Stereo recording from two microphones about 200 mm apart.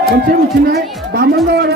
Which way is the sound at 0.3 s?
50° right (ahead or behind).